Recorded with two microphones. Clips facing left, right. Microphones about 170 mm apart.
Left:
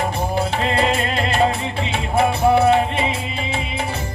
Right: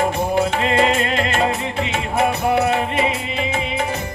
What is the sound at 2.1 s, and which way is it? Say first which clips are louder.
Music: left 3 dB; 30° left (ahead or behind).